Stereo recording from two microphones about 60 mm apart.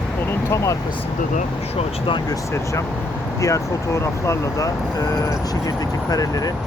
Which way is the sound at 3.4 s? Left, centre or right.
Left.